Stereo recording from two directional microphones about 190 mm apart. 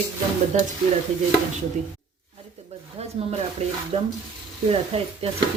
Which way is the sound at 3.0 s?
30° right (ahead or behind).